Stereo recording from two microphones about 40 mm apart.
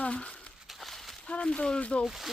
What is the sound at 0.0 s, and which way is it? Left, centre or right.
Speech, left.